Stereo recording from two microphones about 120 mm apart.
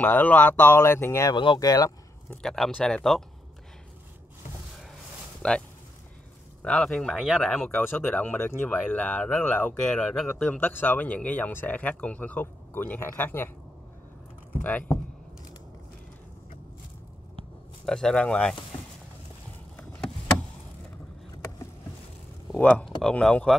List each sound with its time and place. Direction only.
0.0 s speech: 10° left (ahead or behind)
1.3 s speech: 45° left (ahead or behind)
1.6 s speech: 30° left (ahead or behind)
2.3 s speech: 5° left (ahead or behind)
5.4 s speech: 10° left (ahead or behind)
6.6 s speech: 10° left (ahead or behind)
14.5 s speech: 15° left (ahead or behind)
17.8 s speech: 5° left (ahead or behind)
22.6 s speech: 10° left (ahead or behind)